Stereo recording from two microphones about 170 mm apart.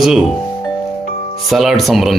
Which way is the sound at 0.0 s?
Centre (ahead or behind).